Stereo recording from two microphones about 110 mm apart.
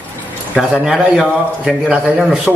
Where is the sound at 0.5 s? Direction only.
10° right (ahead or behind).